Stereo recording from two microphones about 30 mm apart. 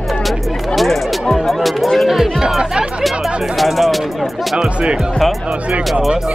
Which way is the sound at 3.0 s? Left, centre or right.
Centre.